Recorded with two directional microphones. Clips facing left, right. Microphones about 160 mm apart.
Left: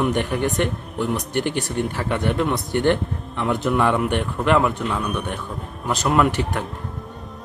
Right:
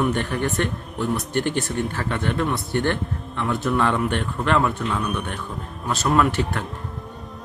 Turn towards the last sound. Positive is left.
turn(degrees=15)  # may be behind; listen again after turning